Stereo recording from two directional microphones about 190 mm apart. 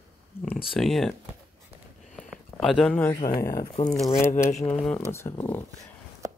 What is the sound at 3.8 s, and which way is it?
Speech, 40° left (ahead or behind).